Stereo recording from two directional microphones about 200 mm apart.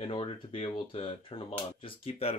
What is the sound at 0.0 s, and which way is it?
Speech, 30° left (ahead or behind).